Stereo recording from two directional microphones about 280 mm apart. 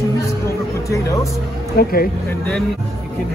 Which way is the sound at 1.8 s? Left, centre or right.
Left.